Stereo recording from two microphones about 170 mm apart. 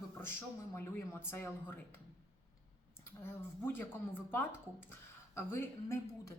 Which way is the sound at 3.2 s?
15° left (ahead or behind).